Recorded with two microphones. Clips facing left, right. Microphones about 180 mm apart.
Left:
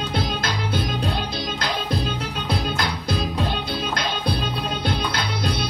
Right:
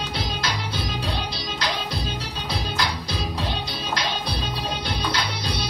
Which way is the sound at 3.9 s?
50° left (ahead or behind).